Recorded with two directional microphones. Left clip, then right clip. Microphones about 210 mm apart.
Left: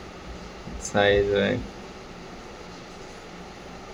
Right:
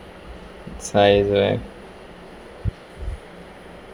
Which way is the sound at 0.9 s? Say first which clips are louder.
Right 5 dB; 15° right (ahead or behind).